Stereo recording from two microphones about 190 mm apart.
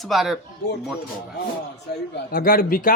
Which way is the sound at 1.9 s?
60° left (ahead or behind).